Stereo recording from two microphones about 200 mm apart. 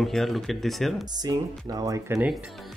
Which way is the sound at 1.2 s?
20° right (ahead or behind).